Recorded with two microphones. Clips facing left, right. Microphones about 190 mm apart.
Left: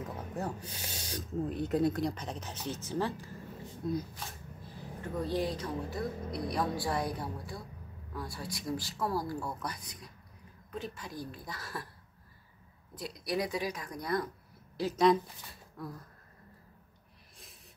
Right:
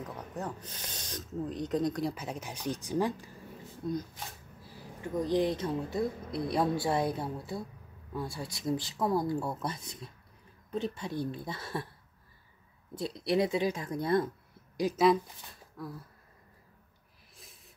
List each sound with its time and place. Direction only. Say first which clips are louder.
0.4 s speech: left 1 dB; 10° left (ahead or behind); by 3.3 s 15° right (ahead or behind)
3.8 s speech: even; centre (ahead or behind)
5.0 s speech: right 4 dB; 20° right (ahead or behind)
12.9 s speech: right 5 dB; 25° right (ahead or behind)
14.8 s a woman's voice: right 2 dB; 15° right (ahead or behind)
15.8 s speech: right 1 dB; centre (ahead or behind)